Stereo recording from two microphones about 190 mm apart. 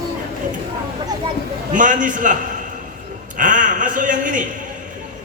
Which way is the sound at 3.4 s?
45° right (ahead or behind).